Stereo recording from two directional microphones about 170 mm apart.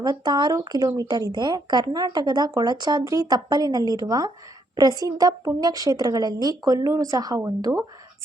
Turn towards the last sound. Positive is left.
turn(degrees=-20)  # may be behind; listen again after turning